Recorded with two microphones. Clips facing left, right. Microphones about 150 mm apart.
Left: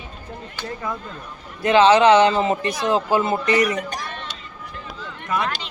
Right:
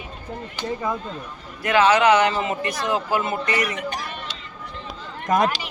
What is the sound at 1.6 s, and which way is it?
Speech, 25° left (ahead or behind).